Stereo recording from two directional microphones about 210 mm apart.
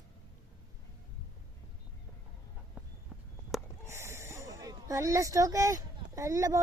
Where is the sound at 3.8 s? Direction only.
15° right (ahead or behind).